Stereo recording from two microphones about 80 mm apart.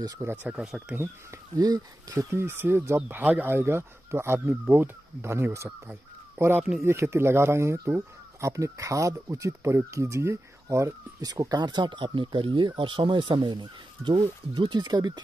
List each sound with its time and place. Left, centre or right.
0.2 s speech: right
0.5 s speech: centre
0.9 s speech: right
1.6 s speech: right
2.1 s speech: right
3.1 s speech: centre; by 15.1 s right